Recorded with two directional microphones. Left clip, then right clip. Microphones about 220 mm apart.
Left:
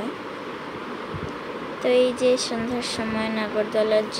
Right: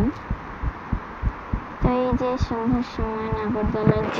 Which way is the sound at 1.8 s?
Centre (ahead or behind).